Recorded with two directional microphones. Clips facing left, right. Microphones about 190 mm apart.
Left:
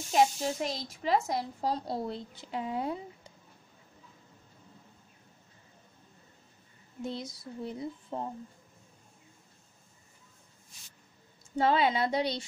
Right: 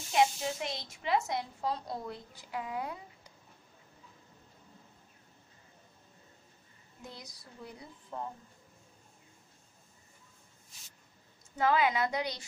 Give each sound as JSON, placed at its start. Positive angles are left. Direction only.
{"t": 0.1, "sound": "speech", "side_deg": 40}
{"t": 7.0, "sound": "speech", "side_deg": 25}
{"t": 11.5, "sound": "speech", "side_deg": 30}